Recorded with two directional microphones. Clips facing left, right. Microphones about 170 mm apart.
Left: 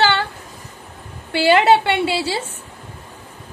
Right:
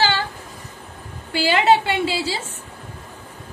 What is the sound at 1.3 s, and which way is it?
A woman's voice, 65° left (ahead or behind).